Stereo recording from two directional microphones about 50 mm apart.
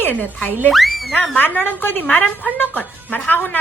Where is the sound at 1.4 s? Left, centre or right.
Left.